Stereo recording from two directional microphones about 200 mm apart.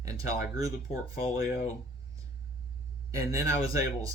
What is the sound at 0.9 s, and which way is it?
Speech, 30° left (ahead or behind).